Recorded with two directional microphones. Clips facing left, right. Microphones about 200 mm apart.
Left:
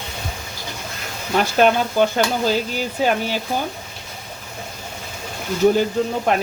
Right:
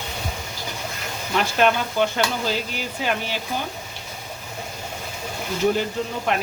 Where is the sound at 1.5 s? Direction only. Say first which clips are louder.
Left 4 dB; 40° left (ahead or behind).